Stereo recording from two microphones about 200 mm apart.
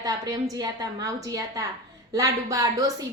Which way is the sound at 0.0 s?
20° right (ahead or behind).